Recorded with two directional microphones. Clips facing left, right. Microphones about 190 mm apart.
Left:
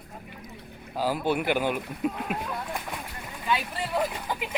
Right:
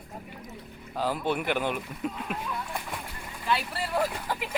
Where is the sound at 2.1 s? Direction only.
55° left (ahead or behind).